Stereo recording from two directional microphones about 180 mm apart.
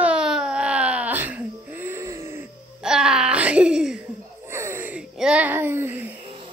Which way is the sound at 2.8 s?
5° right (ahead or behind).